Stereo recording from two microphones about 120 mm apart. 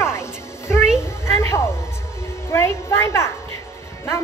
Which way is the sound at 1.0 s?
20° left (ahead or behind).